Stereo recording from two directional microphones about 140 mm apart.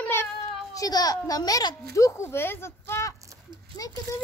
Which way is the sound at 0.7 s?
25° left (ahead or behind).